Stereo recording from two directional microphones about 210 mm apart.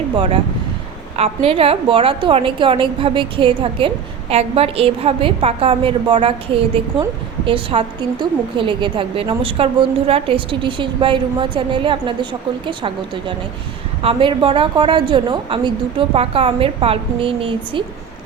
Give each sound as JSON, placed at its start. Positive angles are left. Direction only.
{"t": 1.1, "sound": "a woman's voice", "side_deg": -30}